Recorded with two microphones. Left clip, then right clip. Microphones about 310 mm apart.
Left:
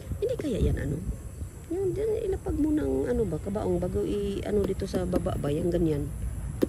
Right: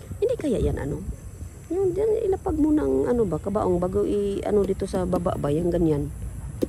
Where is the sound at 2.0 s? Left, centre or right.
Right.